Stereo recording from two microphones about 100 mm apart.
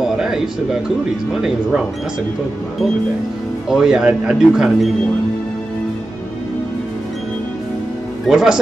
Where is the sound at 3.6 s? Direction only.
5° right (ahead or behind).